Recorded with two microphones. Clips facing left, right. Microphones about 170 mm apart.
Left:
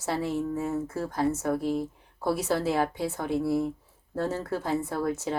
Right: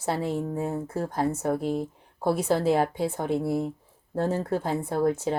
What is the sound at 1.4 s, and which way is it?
Speech, 25° right (ahead or behind).